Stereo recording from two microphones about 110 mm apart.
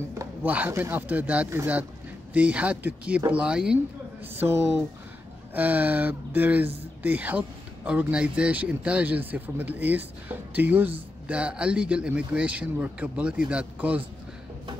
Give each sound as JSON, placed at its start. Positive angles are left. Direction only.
{"t": 0.1, "sound": "a sound", "side_deg": -25}
{"t": 0.5, "sound": "speech", "side_deg": -20}
{"t": 4.2, "sound": "speech", "side_deg": -20}